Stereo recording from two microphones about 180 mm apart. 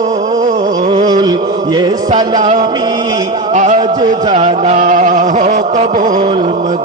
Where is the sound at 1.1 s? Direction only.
25° right (ahead or behind).